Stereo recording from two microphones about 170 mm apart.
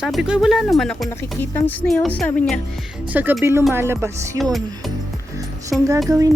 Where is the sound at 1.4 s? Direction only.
10° left (ahead or behind).